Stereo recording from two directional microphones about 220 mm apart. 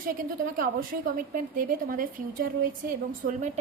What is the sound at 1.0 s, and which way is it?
A woman's voice, 40° right (ahead or behind).